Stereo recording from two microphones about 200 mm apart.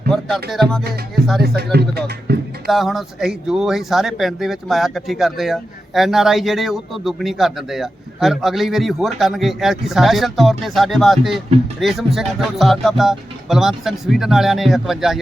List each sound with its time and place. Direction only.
0.1 s music: centre (ahead or behind)
0.5 s speech: centre (ahead or behind)
1.4 s speech: 55° right (ahead or behind)
2.6 s speech: centre (ahead or behind)